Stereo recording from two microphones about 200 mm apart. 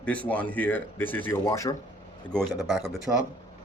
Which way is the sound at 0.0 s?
5° left (ahead or behind).